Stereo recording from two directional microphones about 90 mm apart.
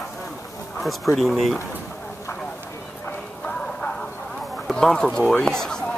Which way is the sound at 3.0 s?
10° left (ahead or behind).